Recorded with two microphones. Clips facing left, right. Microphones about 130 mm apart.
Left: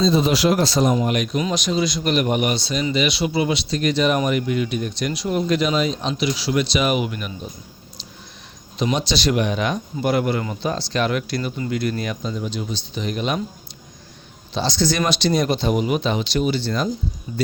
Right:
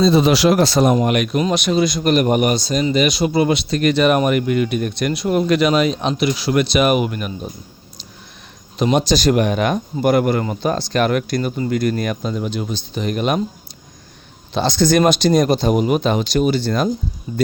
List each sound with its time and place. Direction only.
0.0 s speech: 70° right (ahead or behind); by 7.3 s 50° right (ahead or behind)
8.8 s speech: 50° right (ahead or behind)
14.5 s speech: 55° right (ahead or behind)